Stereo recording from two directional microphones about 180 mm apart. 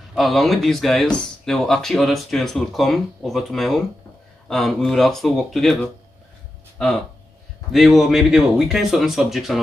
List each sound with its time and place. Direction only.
0.1 s speech: centre (ahead or behind)
7.7 s speech: centre (ahead or behind)